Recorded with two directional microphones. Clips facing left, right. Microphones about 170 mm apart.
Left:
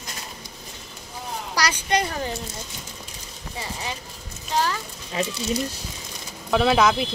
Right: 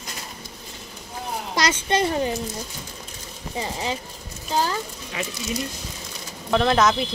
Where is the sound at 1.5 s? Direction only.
25° right (ahead or behind).